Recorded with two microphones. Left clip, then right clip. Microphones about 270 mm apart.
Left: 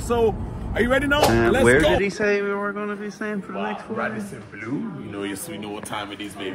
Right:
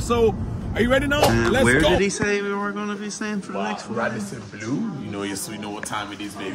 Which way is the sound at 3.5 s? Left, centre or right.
Right.